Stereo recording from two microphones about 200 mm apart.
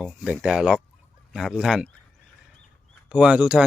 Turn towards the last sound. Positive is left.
turn(degrees=-5)  # may be behind; listen again after turning